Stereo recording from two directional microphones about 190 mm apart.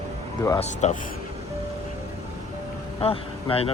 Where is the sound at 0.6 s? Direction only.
35° left (ahead or behind).